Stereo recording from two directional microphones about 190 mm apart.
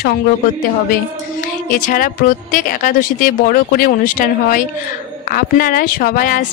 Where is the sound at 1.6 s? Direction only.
45° left (ahead or behind).